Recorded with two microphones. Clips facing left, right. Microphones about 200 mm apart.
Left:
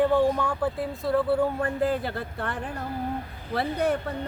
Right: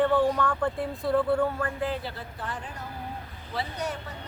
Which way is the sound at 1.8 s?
50° left (ahead or behind).